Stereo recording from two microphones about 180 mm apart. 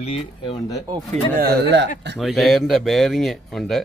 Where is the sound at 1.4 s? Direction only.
75° right (ahead or behind).